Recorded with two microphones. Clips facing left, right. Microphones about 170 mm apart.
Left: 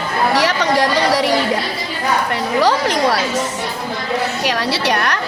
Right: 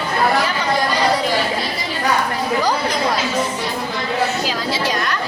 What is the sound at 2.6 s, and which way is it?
Chatter, 85° left.